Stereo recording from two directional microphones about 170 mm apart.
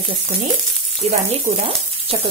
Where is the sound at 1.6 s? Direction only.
35° right (ahead or behind).